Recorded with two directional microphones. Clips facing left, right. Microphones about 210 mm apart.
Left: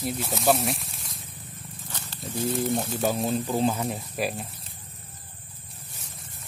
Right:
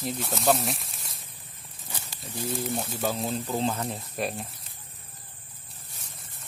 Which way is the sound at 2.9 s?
20° left (ahead or behind).